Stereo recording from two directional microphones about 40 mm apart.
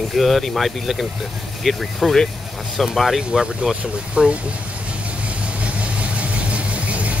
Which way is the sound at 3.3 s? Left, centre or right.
Centre.